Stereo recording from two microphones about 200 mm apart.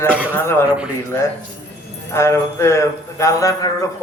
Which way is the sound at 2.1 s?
15° left (ahead or behind).